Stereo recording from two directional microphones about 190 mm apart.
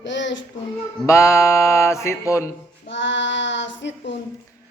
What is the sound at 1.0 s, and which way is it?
Music, 15° left (ahead or behind).